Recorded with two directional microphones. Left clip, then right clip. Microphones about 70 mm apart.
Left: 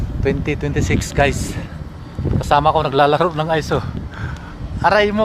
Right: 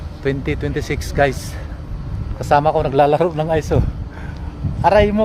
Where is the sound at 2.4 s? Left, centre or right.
Right.